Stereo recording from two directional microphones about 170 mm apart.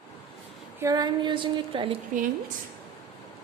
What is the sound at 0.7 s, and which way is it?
A woman's voice, 20° right (ahead or behind).